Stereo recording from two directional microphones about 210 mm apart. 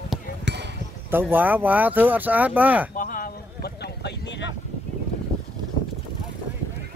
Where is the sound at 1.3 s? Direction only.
10° right (ahead or behind).